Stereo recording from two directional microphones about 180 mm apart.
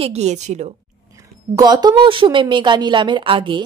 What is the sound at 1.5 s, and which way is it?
Speech, 20° right (ahead or behind).